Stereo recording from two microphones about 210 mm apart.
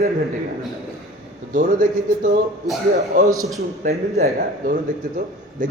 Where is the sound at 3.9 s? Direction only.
45° right (ahead or behind).